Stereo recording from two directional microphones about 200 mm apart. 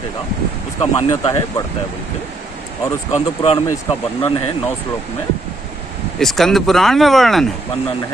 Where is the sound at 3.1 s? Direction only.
30° left (ahead or behind).